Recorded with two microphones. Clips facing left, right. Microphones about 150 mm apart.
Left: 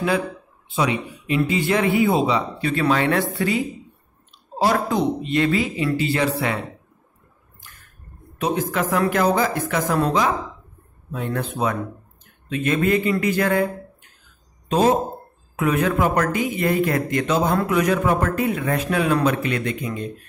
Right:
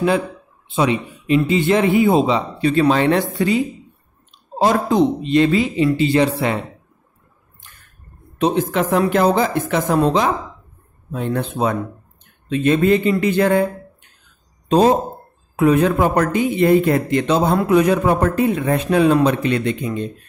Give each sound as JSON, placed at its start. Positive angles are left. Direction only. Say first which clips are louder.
{"t": 0.7, "sound": "speech", "louder": "right 4 dB", "side_deg": -30}
{"t": 8.4, "sound": "speech", "louder": "right 5 dB", "side_deg": -30}
{"t": 14.7, "sound": "speech", "louder": "right 4 dB", "side_deg": -35}